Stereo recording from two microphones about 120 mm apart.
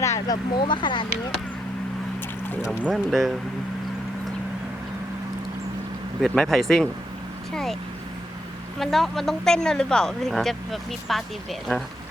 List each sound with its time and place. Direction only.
0.0 s vehicle: 25° left (ahead or behind)
0.6 s speech: 40° left (ahead or behind)
2.6 s speech: 5° right (ahead or behind)
6.2 s speech: 5° left (ahead or behind)
8.8 s speech: centre (ahead or behind)